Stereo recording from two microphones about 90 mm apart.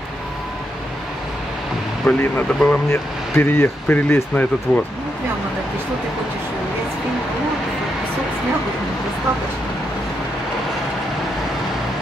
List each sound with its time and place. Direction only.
2.1 s speech: 15° left (ahead or behind)
2.7 s speech: 25° left (ahead or behind)